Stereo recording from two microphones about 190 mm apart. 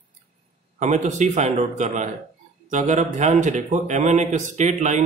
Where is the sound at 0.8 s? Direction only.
40° right (ahead or behind).